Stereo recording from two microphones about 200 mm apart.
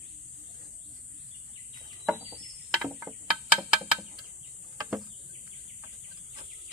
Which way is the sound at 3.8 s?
20° right (ahead or behind).